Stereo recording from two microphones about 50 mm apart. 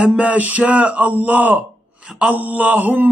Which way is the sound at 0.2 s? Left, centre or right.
Right.